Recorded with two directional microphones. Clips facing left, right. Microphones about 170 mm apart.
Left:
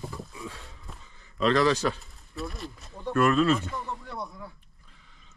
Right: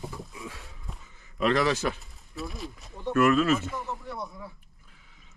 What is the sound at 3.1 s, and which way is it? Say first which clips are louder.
Speech: even; 30° left (ahead or behind).